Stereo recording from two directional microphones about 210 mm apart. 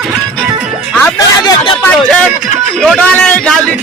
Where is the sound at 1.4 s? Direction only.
25° left (ahead or behind).